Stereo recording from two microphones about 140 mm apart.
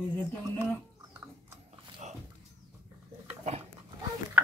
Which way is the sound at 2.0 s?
55° right (ahead or behind).